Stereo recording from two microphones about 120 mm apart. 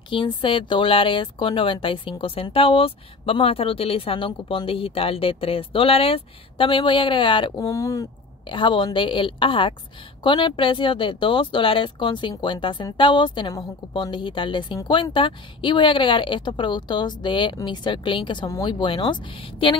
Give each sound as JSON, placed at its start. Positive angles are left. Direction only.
{"t": 0.1, "sound": "speech", "side_deg": 45}
{"t": 7.5, "sound": "speech", "side_deg": 30}
{"t": 8.5, "sound": "speech", "side_deg": 40}